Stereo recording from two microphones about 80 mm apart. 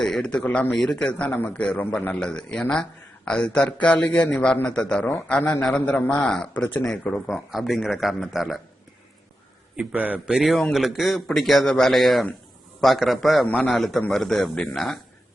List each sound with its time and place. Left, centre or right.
0.0 s a man's voice: centre
0.7 s a man's voice: centre
5.4 s a man's voice: left
7.3 s a man's voice: centre
9.7 s a man's voice: centre
10.3 s a man's voice: centre